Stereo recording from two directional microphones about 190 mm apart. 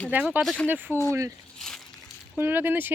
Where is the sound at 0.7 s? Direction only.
10° right (ahead or behind).